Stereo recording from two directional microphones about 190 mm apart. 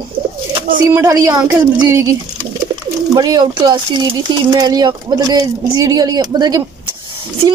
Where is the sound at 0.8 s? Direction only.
15° right (ahead or behind).